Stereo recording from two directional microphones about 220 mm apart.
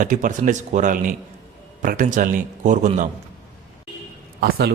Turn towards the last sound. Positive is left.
turn(degrees=-45)  # may be behind; listen again after turning